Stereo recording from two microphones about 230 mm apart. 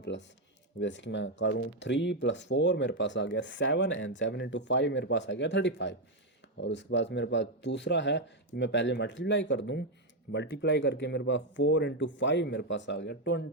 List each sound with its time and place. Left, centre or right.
0.1 s speech: left